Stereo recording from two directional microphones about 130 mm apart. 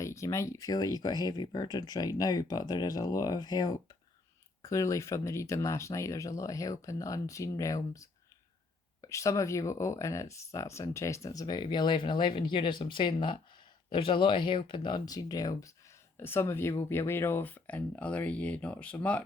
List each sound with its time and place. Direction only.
0.0 s speech: 20° left (ahead or behind)